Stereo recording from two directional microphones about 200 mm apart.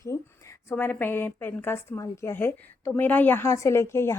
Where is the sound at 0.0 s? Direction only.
15° left (ahead or behind).